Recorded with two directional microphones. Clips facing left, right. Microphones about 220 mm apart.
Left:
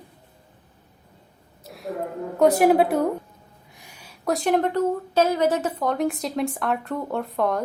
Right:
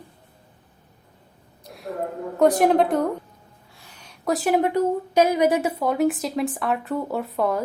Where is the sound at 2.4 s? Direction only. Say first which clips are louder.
Left 1 dB; 5° left (ahead or behind).